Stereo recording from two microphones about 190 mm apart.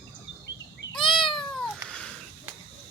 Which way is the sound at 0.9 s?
25° left (ahead or behind).